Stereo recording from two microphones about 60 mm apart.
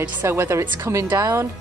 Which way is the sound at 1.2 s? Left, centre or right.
Right.